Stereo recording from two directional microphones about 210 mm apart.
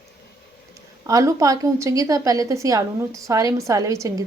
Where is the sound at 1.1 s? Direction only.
15° right (ahead or behind).